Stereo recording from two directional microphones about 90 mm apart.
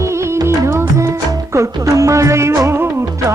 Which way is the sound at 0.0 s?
30° right (ahead or behind).